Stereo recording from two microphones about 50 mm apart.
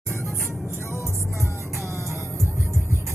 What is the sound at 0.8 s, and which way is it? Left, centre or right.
Music, left.